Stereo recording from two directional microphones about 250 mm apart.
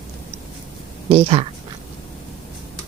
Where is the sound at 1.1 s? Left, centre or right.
Right.